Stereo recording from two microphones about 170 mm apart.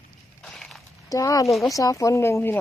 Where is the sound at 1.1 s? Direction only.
20° left (ahead or behind).